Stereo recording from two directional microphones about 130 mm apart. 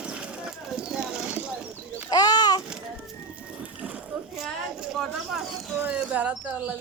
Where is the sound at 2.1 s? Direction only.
30° left (ahead or behind).